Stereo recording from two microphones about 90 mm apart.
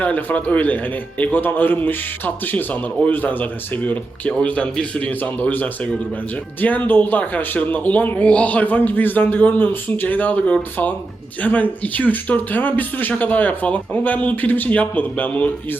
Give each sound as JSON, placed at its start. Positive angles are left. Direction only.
{"t": 0.0, "sound": "a man's voice", "side_deg": 20}